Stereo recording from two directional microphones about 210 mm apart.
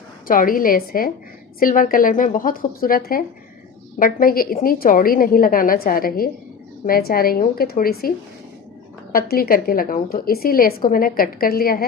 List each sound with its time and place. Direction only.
0.3 s a woman's voice: 40° left (ahead or behind)
9.1 s a woman's voice: 45° left (ahead or behind)